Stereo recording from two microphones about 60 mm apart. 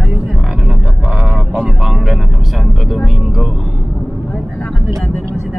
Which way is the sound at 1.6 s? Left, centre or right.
Centre.